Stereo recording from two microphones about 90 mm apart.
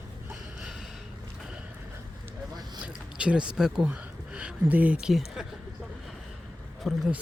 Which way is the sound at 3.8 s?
20° right (ahead or behind).